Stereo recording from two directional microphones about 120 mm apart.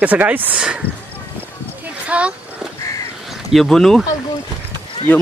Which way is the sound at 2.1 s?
10° right (ahead or behind).